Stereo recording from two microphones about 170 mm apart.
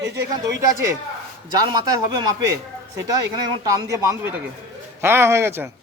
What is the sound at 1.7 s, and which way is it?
Speech, 25° right (ahead or behind).